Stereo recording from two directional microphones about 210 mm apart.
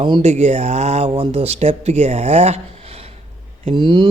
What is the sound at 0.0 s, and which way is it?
Speech, 30° right (ahead or behind).